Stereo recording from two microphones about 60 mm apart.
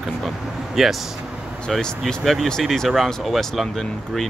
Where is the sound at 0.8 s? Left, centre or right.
Centre.